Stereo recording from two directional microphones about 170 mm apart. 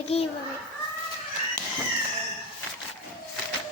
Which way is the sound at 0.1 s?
35° left (ahead or behind).